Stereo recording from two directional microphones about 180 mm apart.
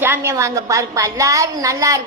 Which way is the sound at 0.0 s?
15° right (ahead or behind).